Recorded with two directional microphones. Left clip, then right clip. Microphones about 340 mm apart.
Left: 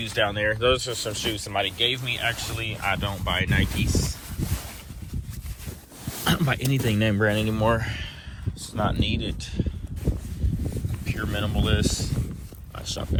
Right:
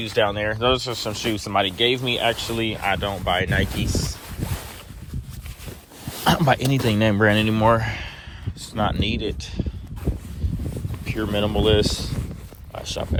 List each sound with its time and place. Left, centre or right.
0.0 s speech: centre
6.2 s speech: centre
11.0 s speech: centre
12.7 s a sound: centre